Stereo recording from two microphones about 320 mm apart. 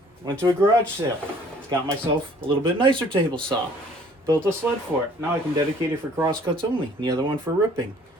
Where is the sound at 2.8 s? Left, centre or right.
Centre.